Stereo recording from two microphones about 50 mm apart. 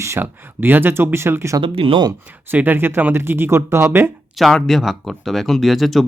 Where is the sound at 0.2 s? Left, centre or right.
Right.